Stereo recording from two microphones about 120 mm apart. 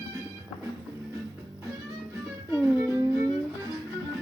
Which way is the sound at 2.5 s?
20° right (ahead or behind).